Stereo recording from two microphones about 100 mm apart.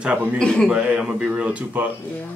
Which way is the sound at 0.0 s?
15° right (ahead or behind).